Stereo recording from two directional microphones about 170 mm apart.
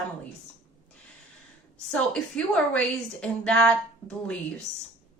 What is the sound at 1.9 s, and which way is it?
A woman's voice, 5° left (ahead or behind).